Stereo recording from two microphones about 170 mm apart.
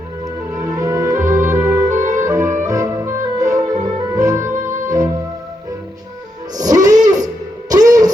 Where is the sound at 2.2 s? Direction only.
20° right (ahead or behind).